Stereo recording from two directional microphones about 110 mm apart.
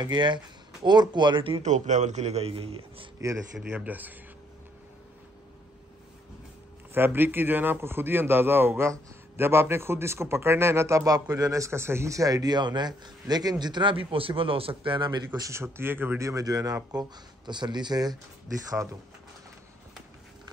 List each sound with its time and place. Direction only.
0.0 s speech: 45° right (ahead or behind)
1.6 s a man's voice: 90° right; by 3.1 s 60° right (ahead or behind)
3.5 s speech: 15° right (ahead or behind)
6.9 s a man's voice: 20° right (ahead or behind); by 15.5 s 35° right (ahead or behind)
15.5 s a man's voice: 20° right (ahead or behind); by 18.1 s 40° right (ahead or behind)